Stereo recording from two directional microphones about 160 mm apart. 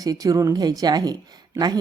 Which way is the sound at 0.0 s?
20° right (ahead or behind).